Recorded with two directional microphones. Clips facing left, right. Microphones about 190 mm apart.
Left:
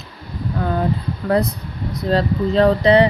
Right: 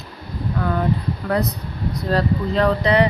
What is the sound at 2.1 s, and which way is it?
Speech, 30° left (ahead or behind).